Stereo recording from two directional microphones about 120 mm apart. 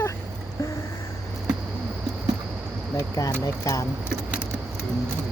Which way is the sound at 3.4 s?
25° left (ahead or behind).